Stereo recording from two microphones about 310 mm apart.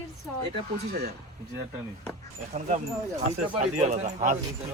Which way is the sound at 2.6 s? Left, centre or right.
Right.